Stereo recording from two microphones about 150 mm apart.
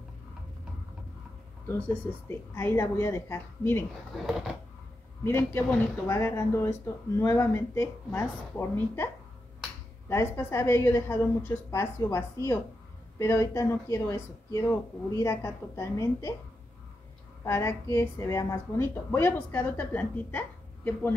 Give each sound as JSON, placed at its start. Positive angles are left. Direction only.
{"t": 1.7, "sound": "speech", "side_deg": 15}
{"t": 4.1, "sound": "speech", "side_deg": 0}
{"t": 5.2, "sound": "speech", "side_deg": 15}
{"t": 17.5, "sound": "speech", "side_deg": 15}